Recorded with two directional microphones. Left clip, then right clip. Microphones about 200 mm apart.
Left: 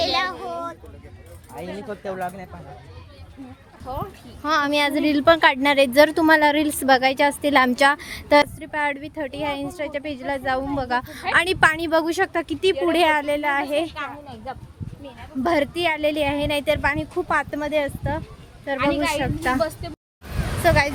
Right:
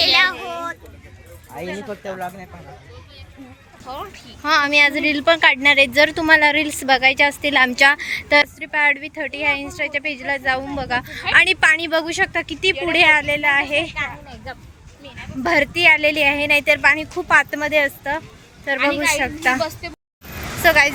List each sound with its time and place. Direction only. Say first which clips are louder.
0.0 s a sound: right 7 dB; 20° left (ahead or behind)
0.3 s a sound: right 2 dB; centre (ahead or behind)
1.6 s speech: right 5 dB; 20° right (ahead or behind)
3.9 s speech: even; 30° left (ahead or behind)
4.4 s a woman's voice: right 5 dB; 20° left (ahead or behind)
13.9 s speech: right 5 dB; 55° left (ahead or behind)
15.4 s speech: right 7 dB; 15° left (ahead or behind)
20.6 s speech: right 5 dB; 5° left (ahead or behind)